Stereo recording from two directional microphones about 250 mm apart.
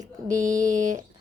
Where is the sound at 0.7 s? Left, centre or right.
Right.